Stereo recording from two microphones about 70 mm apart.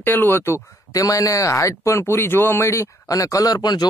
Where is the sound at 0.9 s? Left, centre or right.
Left.